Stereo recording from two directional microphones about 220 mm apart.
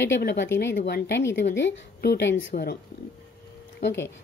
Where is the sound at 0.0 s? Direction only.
50° left (ahead or behind).